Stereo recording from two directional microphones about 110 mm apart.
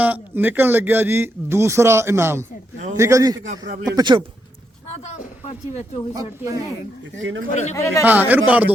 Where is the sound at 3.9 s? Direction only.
45° right (ahead or behind).